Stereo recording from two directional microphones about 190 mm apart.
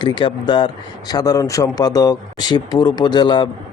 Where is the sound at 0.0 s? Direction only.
25° left (ahead or behind).